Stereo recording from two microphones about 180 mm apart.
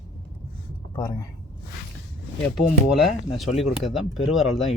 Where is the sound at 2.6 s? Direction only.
Centre (ahead or behind).